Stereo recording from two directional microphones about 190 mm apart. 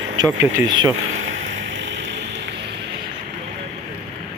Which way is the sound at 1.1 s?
90° right.